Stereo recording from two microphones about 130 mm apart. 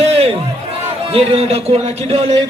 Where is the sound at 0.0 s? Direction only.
50° right (ahead or behind).